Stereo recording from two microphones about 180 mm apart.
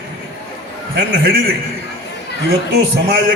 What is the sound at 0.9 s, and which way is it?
Speech, 65° right (ahead or behind).